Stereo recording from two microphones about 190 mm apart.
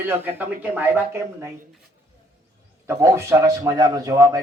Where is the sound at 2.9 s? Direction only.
15° right (ahead or behind).